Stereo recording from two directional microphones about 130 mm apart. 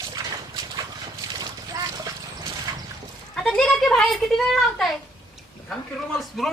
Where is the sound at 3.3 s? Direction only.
5° left (ahead or behind).